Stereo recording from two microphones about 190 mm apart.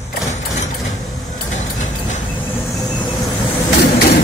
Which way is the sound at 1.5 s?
40° left (ahead or behind).